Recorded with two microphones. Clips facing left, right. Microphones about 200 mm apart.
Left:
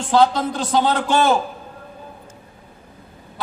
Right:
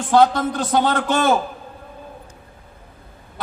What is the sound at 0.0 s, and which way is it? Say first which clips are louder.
A man's voice: right 1 dB; 50° right (ahead or behind).